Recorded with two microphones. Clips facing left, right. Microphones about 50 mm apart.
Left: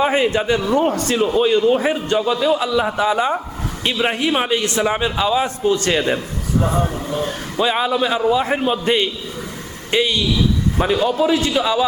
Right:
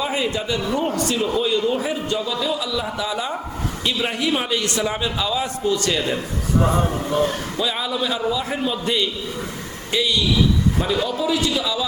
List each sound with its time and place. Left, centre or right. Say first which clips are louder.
0.0 s a man's voice: left 6 dB; left
6.6 s speech: even; centre
7.6 s a man's voice: left 7 dB; left